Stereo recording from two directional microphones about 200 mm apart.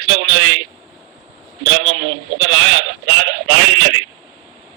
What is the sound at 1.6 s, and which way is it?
A man's voice, 80° right.